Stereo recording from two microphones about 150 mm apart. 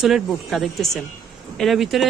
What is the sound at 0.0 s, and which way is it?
Speech, centre (ahead or behind).